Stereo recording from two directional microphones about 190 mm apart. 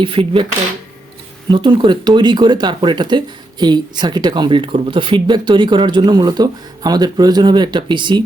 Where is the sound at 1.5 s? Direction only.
25° right (ahead or behind).